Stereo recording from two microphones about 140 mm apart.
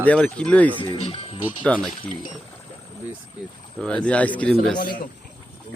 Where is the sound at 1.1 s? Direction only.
40° left (ahead or behind).